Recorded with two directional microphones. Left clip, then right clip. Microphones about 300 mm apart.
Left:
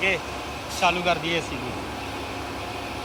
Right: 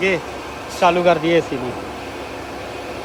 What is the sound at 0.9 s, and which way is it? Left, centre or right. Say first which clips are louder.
Speech: right 9 dB; centre.